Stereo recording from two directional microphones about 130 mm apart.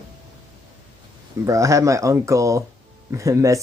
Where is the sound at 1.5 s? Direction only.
25° right (ahead or behind).